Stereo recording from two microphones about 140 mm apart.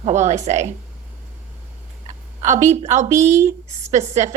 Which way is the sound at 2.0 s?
60° right (ahead or behind).